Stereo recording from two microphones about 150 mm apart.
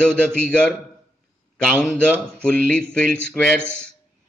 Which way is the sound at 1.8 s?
5° left (ahead or behind).